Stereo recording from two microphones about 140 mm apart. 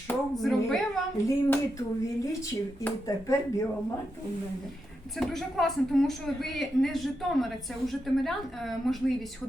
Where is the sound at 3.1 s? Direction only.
20° left (ahead or behind).